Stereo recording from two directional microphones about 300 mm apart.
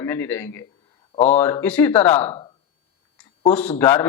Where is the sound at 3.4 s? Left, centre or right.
Centre.